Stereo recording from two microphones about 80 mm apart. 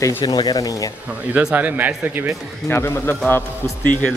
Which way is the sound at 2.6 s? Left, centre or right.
Left.